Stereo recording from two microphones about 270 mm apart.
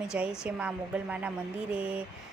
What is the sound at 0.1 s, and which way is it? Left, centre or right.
A woman's voice, centre.